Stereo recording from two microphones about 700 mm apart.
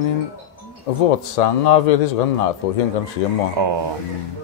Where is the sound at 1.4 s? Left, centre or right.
Left.